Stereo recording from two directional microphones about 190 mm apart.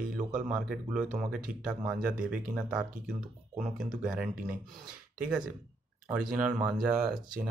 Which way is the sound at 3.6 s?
45° right (ahead or behind).